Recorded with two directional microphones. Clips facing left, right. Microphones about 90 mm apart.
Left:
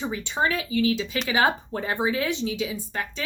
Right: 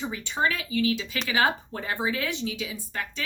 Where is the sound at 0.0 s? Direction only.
25° left (ahead or behind).